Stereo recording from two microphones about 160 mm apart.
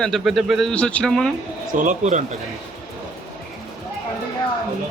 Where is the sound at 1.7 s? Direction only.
55° right (ahead or behind).